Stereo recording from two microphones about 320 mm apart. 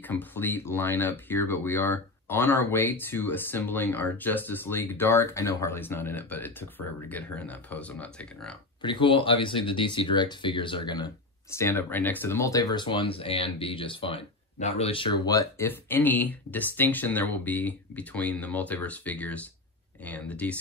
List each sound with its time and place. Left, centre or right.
0.0 s speech: centre
8.8 s speech: centre